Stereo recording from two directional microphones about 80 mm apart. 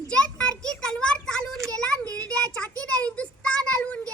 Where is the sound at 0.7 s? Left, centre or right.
Centre.